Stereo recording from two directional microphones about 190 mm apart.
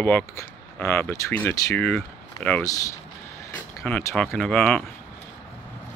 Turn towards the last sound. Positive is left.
turn(degrees=5)  # may be behind; listen again after turning